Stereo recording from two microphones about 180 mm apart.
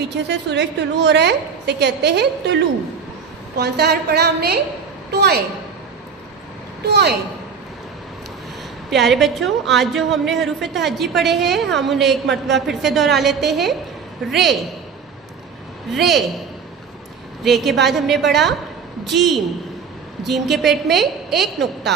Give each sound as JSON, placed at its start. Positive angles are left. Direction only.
{"t": 0.3, "sound": "a woman's voice", "side_deg": -75}
{"t": 3.6, "sound": "a woman's voice", "side_deg": -65}
{"t": 6.8, "sound": "a woman's voice", "side_deg": -65}
{"t": 8.9, "sound": "a woman's voice", "side_deg": 0}
{"t": 15.9, "sound": "a woman's voice", "side_deg": 0}
{"t": 17.4, "sound": "a woman's voice", "side_deg": 0}